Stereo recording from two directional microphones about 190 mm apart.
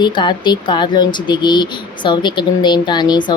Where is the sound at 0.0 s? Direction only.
25° left (ahead or behind).